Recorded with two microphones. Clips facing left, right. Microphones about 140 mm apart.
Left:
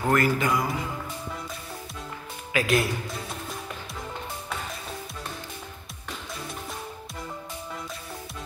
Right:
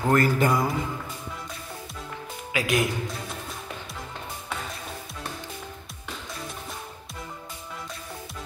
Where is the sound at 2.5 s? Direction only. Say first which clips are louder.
Left 1 dB; 15° right (ahead or behind).